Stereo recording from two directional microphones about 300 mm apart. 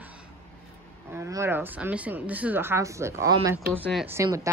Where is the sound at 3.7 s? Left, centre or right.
Centre.